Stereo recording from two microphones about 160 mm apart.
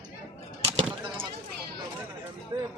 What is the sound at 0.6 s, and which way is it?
Bird, 40° right (ahead or behind).